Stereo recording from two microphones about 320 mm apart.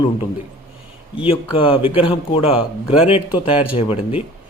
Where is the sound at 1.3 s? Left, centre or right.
Centre.